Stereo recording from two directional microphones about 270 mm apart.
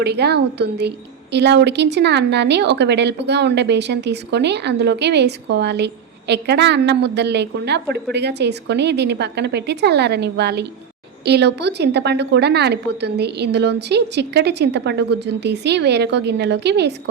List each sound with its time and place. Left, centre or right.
0.0 s a woman's voice: right